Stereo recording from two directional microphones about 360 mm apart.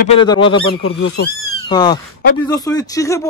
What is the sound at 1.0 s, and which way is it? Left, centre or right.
Speech, left.